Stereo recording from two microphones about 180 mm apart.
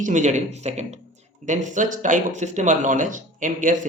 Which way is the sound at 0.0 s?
45° right (ahead or behind).